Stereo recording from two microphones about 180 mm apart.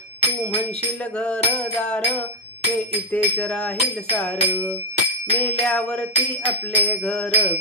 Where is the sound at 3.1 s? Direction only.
5° left (ahead or behind).